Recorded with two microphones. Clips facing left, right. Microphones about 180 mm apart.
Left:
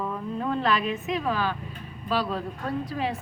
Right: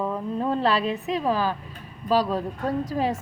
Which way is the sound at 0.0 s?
30° right (ahead or behind).